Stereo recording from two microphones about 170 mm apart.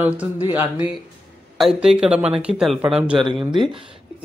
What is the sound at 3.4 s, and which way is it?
Speech, 25° right (ahead or behind).